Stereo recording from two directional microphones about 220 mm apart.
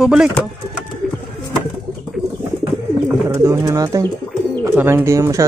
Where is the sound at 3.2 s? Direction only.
15° right (ahead or behind).